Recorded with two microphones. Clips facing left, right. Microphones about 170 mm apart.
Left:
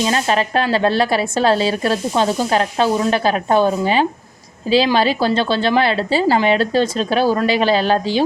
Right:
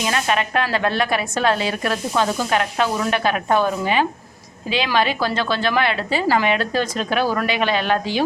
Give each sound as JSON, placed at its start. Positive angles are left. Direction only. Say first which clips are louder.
{"t": 0.0, "sound": "a woman's voice", "louder": "left 4 dB", "side_deg": 30}